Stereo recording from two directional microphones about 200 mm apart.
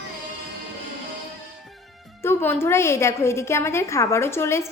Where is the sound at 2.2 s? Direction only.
10° left (ahead or behind).